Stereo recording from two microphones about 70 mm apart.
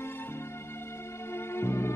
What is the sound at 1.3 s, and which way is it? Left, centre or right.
Music, left.